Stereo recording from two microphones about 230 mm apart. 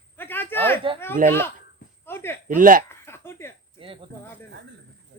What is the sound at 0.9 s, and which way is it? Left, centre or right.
Speech, centre.